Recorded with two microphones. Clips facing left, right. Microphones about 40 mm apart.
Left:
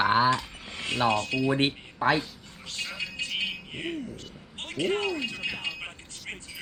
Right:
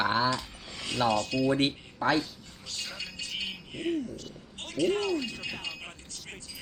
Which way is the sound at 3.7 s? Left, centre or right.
Left.